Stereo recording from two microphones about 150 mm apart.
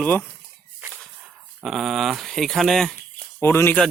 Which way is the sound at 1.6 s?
Centre (ahead or behind).